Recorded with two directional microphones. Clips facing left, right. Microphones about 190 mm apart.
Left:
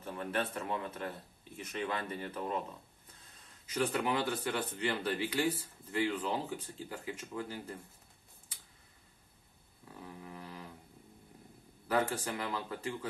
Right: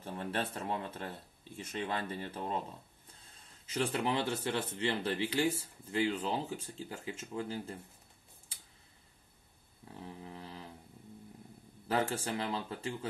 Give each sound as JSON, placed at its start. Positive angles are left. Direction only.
{"t": 0.0, "sound": "speech", "side_deg": -30}
{"t": 9.9, "sound": "a sound", "side_deg": -25}
{"t": 11.9, "sound": "speech", "side_deg": -25}